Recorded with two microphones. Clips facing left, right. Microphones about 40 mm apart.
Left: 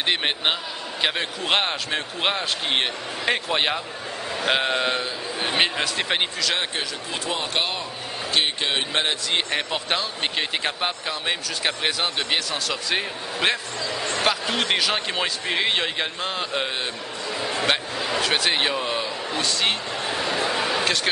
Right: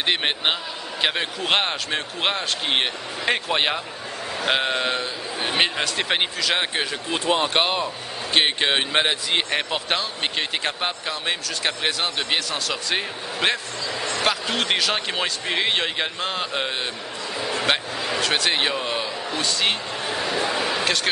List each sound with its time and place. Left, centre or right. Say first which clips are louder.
0.0 s a man's voice: right 1 dB; centre
7.2 s speech: right 5 dB; right; by 21.1 s centre